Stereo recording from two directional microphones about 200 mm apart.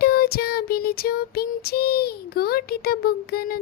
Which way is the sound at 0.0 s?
50° left (ahead or behind).